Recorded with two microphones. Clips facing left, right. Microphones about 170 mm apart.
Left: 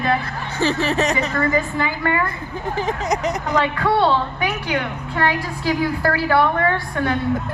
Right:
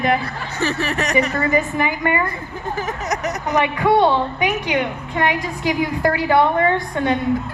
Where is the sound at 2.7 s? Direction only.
20° left (ahead or behind).